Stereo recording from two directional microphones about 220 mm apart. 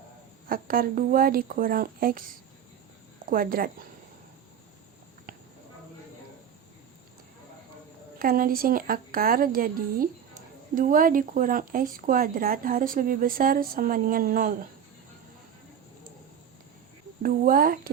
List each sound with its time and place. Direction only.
0.4 s speech: 40° right (ahead or behind)
3.2 s speech: 40° right (ahead or behind)
5.3 s a sound: 40° right (ahead or behind)
8.2 s speech: 40° right (ahead or behind)
17.2 s speech: 40° right (ahead or behind)